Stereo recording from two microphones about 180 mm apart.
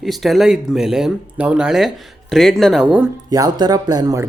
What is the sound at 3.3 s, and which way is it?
Speech, 20° right (ahead or behind).